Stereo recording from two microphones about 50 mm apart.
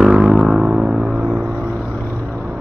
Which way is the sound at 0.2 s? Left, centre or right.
Right.